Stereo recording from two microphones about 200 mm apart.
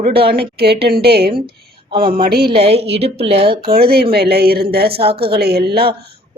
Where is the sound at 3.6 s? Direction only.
50° right (ahead or behind).